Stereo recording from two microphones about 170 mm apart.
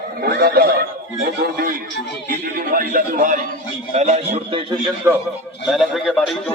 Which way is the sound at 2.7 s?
55° right (ahead or behind).